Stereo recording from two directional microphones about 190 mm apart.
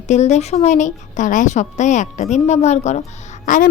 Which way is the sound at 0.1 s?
35° left (ahead or behind).